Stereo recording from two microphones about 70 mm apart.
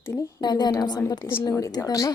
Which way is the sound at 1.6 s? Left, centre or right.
Left.